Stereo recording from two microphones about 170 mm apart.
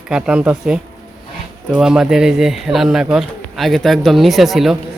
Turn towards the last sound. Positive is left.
turn(degrees=0)  # may be behind; listen again after turning